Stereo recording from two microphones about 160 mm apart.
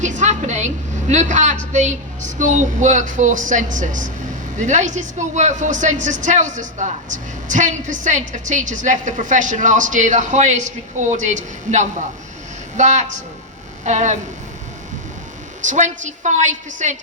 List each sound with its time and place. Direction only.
0.0 s a woman's voice: 50° right (ahead or behind)
15.6 s a woman's voice: 50° right (ahead or behind)